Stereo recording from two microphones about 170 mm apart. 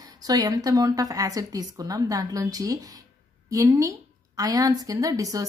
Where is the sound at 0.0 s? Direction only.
20° right (ahead or behind).